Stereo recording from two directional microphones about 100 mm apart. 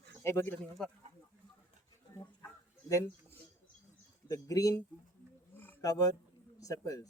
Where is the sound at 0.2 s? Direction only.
25° left (ahead or behind).